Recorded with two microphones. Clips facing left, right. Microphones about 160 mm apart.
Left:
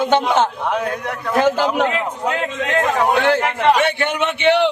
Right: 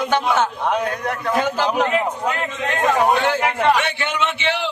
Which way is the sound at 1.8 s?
80° left.